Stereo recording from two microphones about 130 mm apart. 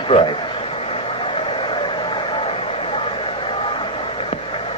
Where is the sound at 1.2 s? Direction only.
40° left (ahead or behind).